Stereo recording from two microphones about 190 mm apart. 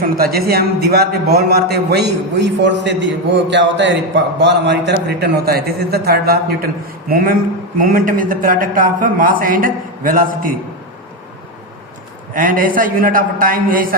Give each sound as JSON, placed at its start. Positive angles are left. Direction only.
{"t": 0.0, "sound": "a man's voice", "side_deg": -50}
{"t": 12.3, "sound": "a man's voice", "side_deg": -45}